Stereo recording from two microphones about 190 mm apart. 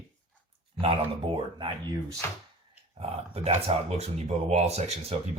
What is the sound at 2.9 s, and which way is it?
Speech, 30° right (ahead or behind).